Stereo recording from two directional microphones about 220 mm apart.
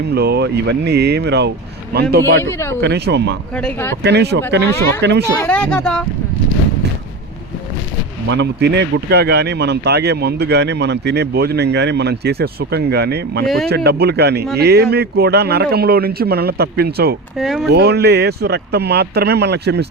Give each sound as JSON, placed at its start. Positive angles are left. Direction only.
{"t": 0.0, "sound": "speech", "side_deg": -50}
{"t": 2.4, "sound": "speech", "side_deg": 10}
{"t": 2.8, "sound": "speech", "side_deg": -50}
{"t": 3.5, "sound": "speech", "side_deg": 5}
{"t": 4.0, "sound": "speech", "side_deg": -50}
{"t": 5.4, "sound": "speech", "side_deg": 5}
{"t": 8.3, "sound": "speech", "side_deg": -50}
{"t": 17.3, "sound": "speech", "side_deg": 0}
{"t": 17.7, "sound": "speech", "side_deg": -50}